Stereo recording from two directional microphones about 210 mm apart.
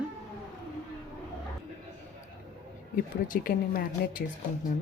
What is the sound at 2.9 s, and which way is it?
Speech, 40° left (ahead or behind).